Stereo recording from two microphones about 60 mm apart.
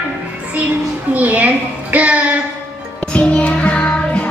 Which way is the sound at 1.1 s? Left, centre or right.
Right.